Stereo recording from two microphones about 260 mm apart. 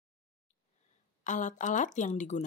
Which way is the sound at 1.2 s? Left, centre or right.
Left.